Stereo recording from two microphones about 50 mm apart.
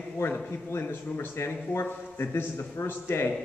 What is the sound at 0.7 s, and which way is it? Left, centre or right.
A man's voice, left.